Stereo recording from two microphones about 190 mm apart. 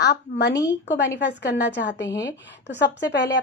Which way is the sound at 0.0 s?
60° left (ahead or behind).